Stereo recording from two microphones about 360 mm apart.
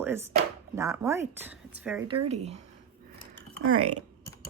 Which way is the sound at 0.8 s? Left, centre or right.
Centre.